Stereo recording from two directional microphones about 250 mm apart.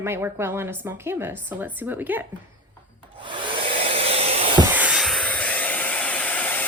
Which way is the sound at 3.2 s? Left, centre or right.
Centre.